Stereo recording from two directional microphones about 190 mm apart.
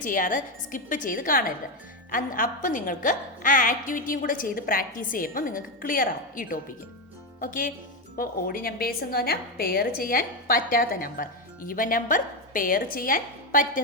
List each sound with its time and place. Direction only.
0.0 s a woman's voice: 45° left (ahead or behind)